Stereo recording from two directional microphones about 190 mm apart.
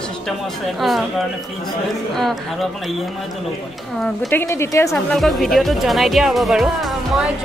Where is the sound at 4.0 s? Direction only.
10° left (ahead or behind).